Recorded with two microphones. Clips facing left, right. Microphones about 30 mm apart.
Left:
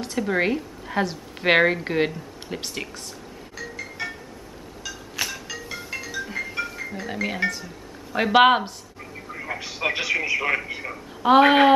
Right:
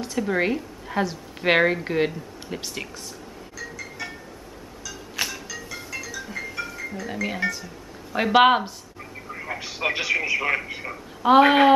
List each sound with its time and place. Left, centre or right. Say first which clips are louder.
0.2 s a woman's voice: left 1 dB; centre
5.1 s music: right 1 dB; centre
6.2 s music: left 3 dB; centre
7.1 s a woman's voice: left 1 dB; centre
7.4 s a man's voice: left 1 dB; centre